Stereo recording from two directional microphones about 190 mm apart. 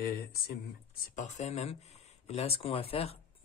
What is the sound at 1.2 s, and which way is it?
Speech, 40° left (ahead or behind).